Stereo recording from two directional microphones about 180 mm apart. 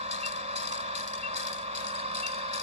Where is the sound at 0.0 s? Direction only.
35° right (ahead or behind).